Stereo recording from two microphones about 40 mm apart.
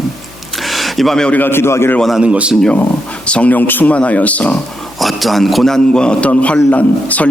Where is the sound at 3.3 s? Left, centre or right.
Left.